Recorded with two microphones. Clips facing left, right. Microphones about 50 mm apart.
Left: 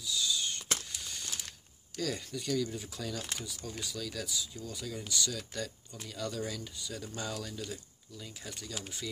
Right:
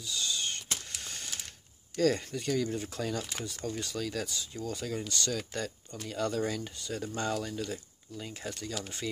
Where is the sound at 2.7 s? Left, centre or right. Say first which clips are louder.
Right 5 dB; right.